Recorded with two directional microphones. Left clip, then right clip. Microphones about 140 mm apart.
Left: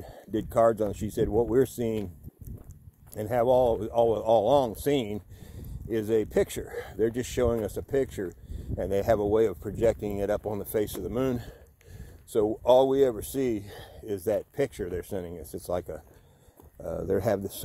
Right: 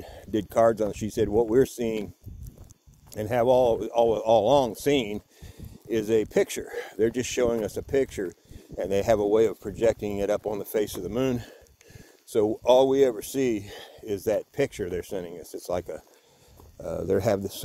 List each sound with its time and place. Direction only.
0.0 s a sound: 30° right (ahead or behind)
0.5 s speech: 20° right (ahead or behind)
1.6 s speech: 15° right (ahead or behind)
3.1 s speech: 25° right (ahead or behind)
16.8 s speech: 25° right (ahead or behind)